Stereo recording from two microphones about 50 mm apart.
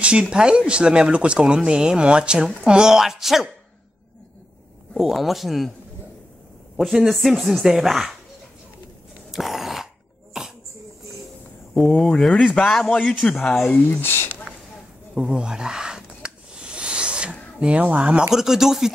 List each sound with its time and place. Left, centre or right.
0.0 s speech: right
4.9 s speech: centre
6.8 s speech: centre
9.3 s a sound: centre
11.7 s speech: centre
13.2 s speech: centre
13.7 s speech: left
15.1 s a sound: centre
18.3 s speech: centre